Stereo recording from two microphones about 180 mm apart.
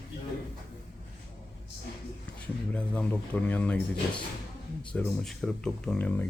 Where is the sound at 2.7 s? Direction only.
5° left (ahead or behind).